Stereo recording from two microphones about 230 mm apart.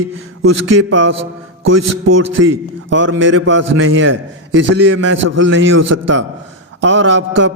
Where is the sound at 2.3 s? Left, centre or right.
Right.